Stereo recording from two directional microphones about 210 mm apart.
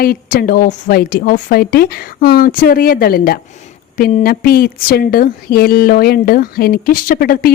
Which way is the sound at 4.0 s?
30° left (ahead or behind).